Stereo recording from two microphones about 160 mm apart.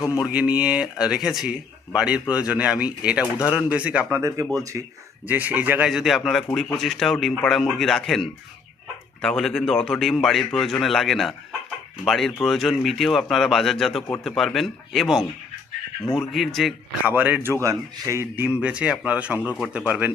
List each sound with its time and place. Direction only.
0.0 s speech: 20° left (ahead or behind)
0.3 s speech: 10° right (ahead or behind)
4.2 s speech: 20° right (ahead or behind); by 16.7 s centre (ahead or behind)
17.1 s speech: 10° right (ahead or behind)